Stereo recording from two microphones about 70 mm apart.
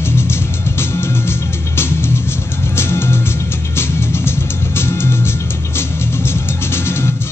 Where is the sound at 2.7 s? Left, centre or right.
Left.